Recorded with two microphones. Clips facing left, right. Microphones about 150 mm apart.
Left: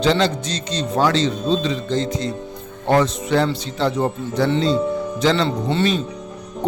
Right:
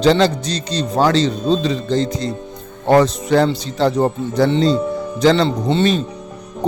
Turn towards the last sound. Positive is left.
turn(degrees=-25)  # may be behind; listen again after turning